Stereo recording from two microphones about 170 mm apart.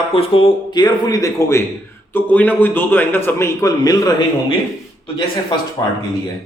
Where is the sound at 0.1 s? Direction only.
35° left (ahead or behind).